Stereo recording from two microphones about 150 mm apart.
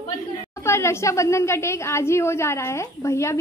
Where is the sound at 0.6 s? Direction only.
15° left (ahead or behind).